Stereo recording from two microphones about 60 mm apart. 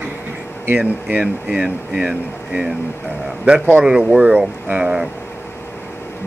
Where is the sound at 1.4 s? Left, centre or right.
Centre.